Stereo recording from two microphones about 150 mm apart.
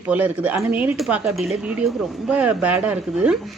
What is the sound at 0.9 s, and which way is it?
Speech, centre (ahead or behind).